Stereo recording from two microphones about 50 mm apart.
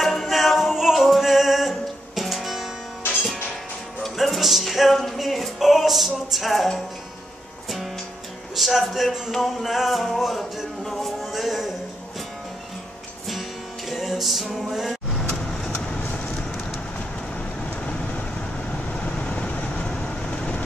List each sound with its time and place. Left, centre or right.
0.0 s music: centre
4.0 s music: centre
8.5 s music: centre
13.8 s music: centre
15.2 s vehicle: centre
18.7 s vehicle: left